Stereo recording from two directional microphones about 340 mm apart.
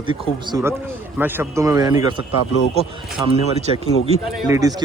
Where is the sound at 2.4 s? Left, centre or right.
Left.